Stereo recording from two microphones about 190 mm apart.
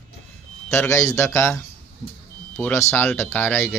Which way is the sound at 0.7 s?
15° left (ahead or behind).